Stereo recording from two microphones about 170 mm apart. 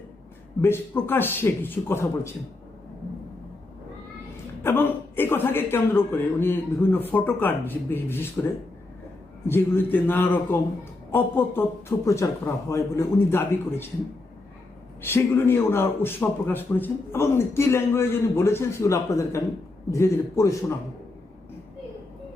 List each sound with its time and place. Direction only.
0.6 s a man's voice: 15° left (ahead or behind)
4.6 s a man's voice: 15° left (ahead or behind)
15.0 s a man's voice: 15° left (ahead or behind)